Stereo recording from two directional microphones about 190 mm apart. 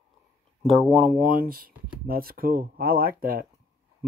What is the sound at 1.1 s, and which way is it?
Speech, 50° right (ahead or behind).